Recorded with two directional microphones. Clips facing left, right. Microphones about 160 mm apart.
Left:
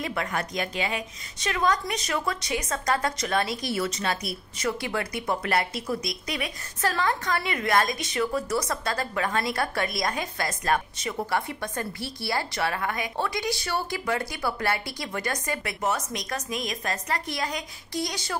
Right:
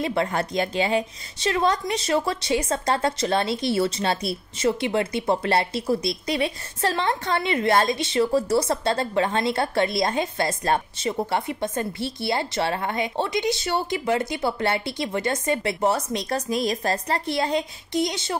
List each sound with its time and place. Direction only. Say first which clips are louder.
0.0 s a woman's voice: right 6 dB; 30° right (ahead or behind)